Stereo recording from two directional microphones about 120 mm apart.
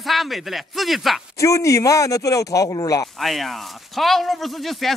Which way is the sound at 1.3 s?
25° left (ahead or behind).